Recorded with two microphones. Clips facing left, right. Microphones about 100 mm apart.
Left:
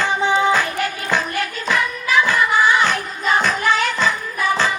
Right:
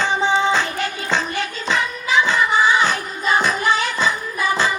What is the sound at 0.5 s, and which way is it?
Music, 25° right (ahead or behind).